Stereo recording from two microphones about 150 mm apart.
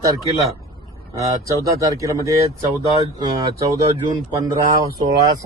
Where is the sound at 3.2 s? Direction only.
30° right (ahead or behind).